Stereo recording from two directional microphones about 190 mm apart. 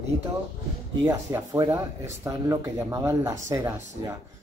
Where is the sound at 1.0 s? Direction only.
20° right (ahead or behind).